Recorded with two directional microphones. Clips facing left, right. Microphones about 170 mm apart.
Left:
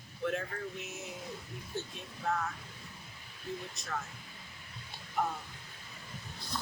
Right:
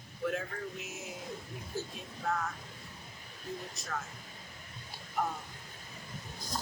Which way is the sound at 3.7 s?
Centre (ahead or behind).